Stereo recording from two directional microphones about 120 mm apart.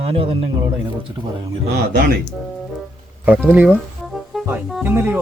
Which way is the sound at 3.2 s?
15° right (ahead or behind).